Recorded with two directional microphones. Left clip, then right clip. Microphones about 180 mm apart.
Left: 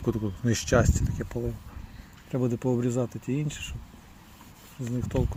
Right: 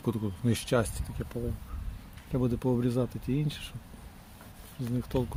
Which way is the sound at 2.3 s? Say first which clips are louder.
Left 2 dB; 10° left (ahead or behind).